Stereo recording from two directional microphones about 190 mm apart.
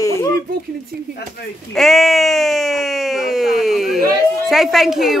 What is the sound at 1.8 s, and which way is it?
Speech, centre (ahead or behind).